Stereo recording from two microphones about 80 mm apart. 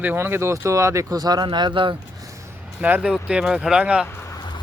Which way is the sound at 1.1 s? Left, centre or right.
Right.